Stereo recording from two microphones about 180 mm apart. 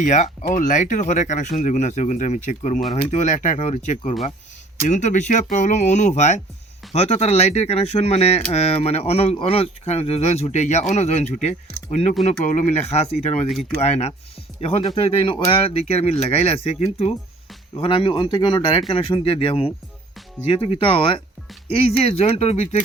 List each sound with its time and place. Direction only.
0.0 s speech: 40° left (ahead or behind)